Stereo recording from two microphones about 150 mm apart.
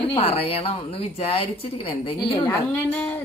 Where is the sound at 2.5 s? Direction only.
15° left (ahead or behind).